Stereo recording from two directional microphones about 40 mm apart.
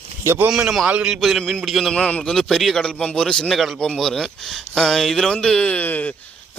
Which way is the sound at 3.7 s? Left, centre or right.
Centre.